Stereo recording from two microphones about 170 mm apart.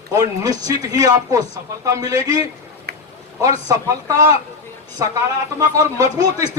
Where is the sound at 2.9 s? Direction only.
70° right (ahead or behind).